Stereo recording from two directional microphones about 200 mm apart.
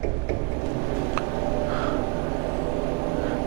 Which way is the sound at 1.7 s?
25° right (ahead or behind).